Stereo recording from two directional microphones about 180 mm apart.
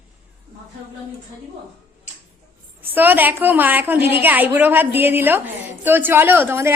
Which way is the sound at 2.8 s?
10° right (ahead or behind).